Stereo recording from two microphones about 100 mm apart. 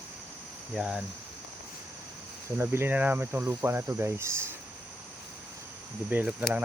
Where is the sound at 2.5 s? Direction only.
20° right (ahead or behind).